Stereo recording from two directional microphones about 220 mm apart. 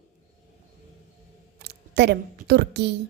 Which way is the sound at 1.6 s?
50° right (ahead or behind).